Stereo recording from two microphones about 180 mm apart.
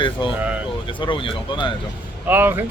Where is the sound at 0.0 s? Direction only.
25° left (ahead or behind).